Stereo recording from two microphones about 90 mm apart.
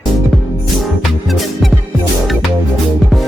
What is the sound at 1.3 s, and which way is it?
Speech, centre (ahead or behind).